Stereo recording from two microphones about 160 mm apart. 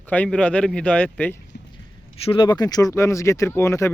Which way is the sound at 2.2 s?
35° left (ahead or behind).